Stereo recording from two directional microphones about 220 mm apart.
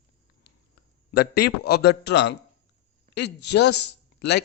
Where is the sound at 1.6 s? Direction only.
50° left (ahead or behind).